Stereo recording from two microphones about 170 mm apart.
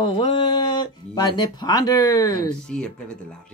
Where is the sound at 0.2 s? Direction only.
25° left (ahead or behind).